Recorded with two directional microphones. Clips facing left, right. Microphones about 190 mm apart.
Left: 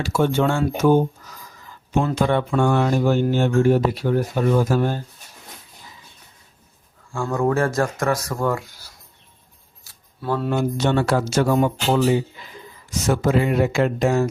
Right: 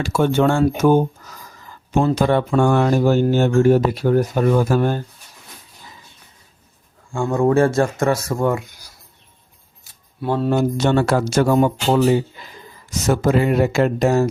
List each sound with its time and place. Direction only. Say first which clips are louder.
0.2 s speech: right 3 dB; 60° right (ahead or behind)
2.0 s speech: right 4 dB; 40° right (ahead or behind)
4.5 s speech: right 1 dB; 60° right (ahead or behind)
7.1 s speech: right 4 dB; 25° right (ahead or behind)
9.8 s a sound: right 4 dB; 20° right (ahead or behind)
10.5 s speech: right 3 dB; 45° right (ahead or behind)
13.1 s speech: right 2 dB; 45° right (ahead or behind)